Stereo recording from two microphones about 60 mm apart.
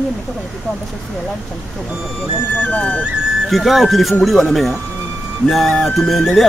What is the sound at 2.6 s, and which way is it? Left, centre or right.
Speech, left.